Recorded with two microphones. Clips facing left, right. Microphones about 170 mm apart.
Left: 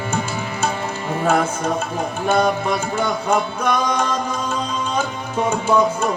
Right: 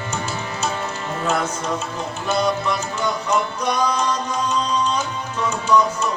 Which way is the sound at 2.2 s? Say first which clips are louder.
Left 3 dB; 50° left (ahead or behind).